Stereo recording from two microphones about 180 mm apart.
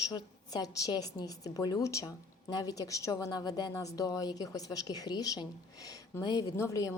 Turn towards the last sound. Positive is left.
turn(degrees=15)  # may be behind; listen again after turning